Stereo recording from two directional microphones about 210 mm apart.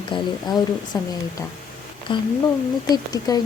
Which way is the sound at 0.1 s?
25° left (ahead or behind).